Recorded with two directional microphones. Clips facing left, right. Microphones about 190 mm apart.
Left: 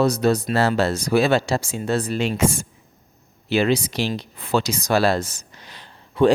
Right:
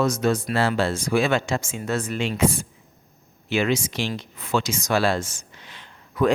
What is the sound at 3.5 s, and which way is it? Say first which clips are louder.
A man's voice: left 3 dB; 35° left (ahead or behind).